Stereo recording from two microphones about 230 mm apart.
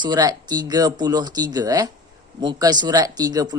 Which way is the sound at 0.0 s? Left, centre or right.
Centre.